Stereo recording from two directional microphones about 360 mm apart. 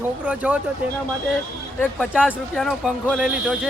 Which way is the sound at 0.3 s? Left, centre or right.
Centre.